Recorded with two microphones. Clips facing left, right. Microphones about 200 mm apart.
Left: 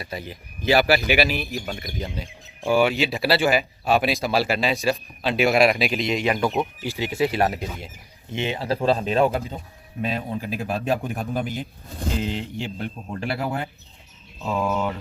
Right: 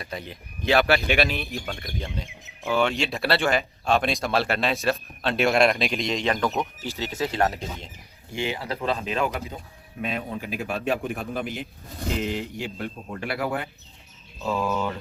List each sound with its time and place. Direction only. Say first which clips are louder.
0.0 s speech: left 2 dB; 5° left (ahead or behind)
8.3 s speech: left 4 dB; 20° left (ahead or behind); by 11.6 s 40° left (ahead or behind)
12.2 s speech: left 1 dB; 25° left (ahead or behind)